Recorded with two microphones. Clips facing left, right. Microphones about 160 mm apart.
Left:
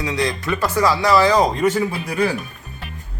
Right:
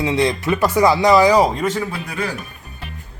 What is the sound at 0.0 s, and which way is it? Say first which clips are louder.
Speech: right 4 dB; 25° right (ahead or behind).